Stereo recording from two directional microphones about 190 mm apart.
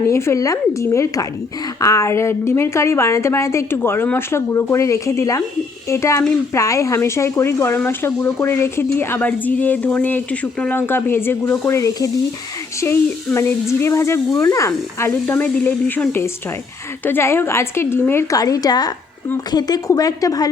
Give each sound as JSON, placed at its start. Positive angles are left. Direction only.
{"t": 0.1, "sound": "a woman's voice", "side_deg": 15}